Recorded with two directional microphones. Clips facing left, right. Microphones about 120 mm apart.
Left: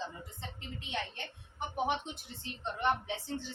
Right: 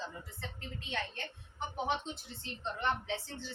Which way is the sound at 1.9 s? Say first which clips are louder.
Left 1 dB; 15° left (ahead or behind).